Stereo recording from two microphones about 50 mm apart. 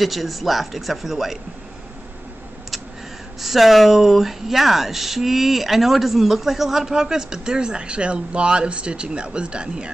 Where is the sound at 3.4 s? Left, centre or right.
Centre.